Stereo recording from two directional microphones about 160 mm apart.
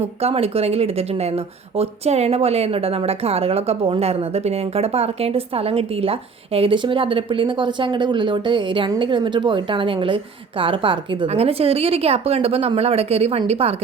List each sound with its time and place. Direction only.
0.2 s a woman's voice: 40° right (ahead or behind)